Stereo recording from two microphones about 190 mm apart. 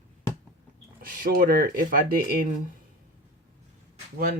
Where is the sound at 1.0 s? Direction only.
45° right (ahead or behind).